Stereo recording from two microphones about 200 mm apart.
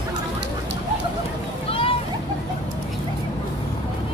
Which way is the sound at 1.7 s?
25° left (ahead or behind).